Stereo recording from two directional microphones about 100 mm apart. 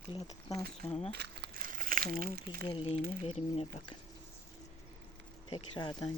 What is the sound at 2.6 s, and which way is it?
Speech, 60° left (ahead or behind).